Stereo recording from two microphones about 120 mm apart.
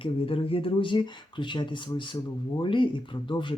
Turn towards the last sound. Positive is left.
turn(degrees=45)  # may be behind; listen again after turning